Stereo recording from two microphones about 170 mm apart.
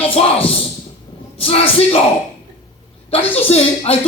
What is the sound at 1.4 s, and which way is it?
Speech, 35° left (ahead or behind).